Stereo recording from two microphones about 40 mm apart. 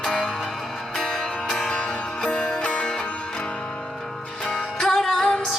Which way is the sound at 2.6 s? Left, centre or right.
Left.